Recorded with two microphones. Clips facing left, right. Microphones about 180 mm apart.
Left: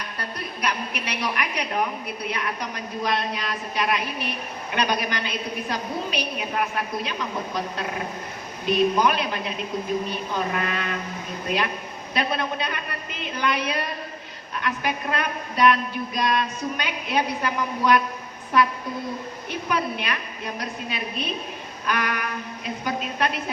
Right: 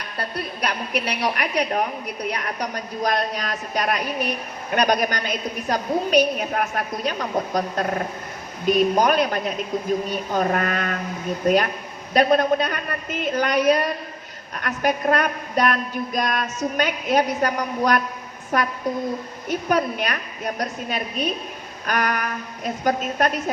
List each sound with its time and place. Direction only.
0.6 s a woman's voice: 35° right (ahead or behind)
19.5 s a man's voice: 45° right (ahead or behind)